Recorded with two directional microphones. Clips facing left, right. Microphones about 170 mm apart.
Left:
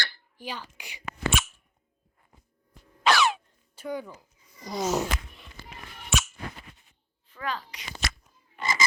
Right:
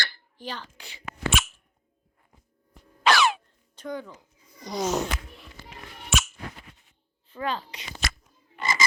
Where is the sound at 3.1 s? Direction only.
90° right.